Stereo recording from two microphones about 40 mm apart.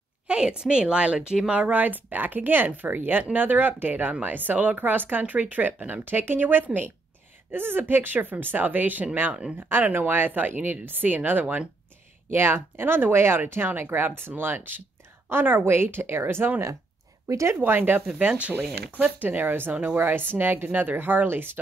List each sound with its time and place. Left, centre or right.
0.3 s a woman's voice: right
1.5 s speech: right
7.5 s a woman's voice: right
12.3 s speech: right
13.8 s a woman's voice: right
15.3 s a woman's voice: right
17.6 s a woman's voice: right
18.2 s speech: right
19.1 s a woman's voice: right
19.7 s speech: right
20.0 s a woman's voice: right
21.3 s speech: right